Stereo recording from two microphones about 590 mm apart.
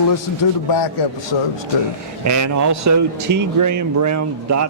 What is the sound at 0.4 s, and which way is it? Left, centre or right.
Speech, left.